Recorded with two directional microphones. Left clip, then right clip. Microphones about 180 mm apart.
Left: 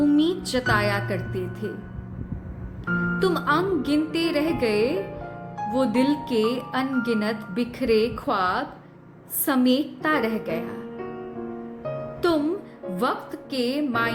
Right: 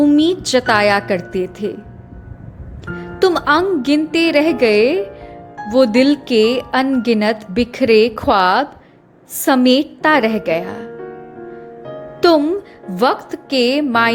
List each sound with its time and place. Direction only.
0.0 s speech: 40° right (ahead or behind)
3.2 s speech: 40° right (ahead or behind)
12.2 s speech: 45° right (ahead or behind)